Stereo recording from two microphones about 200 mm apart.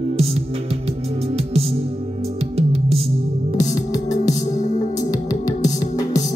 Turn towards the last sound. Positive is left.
turn(degrees=20)  # may be behind; listen again after turning